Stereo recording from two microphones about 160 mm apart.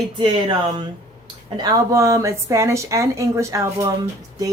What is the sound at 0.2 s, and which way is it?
Speech, 30° right (ahead or behind).